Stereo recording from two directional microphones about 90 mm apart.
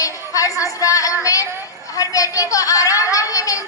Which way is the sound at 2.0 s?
40° left (ahead or behind).